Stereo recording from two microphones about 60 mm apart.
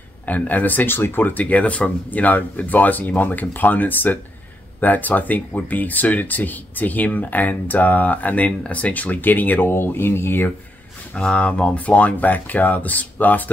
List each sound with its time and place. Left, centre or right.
0.3 s speech: left
11.1 s speech: centre